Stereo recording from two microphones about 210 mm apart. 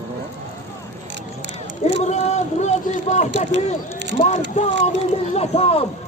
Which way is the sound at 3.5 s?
60° right (ahead or behind).